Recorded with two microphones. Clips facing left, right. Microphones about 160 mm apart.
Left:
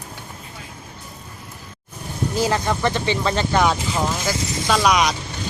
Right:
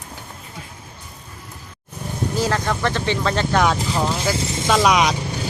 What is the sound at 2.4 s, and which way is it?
Speech, 10° left (ahead or behind).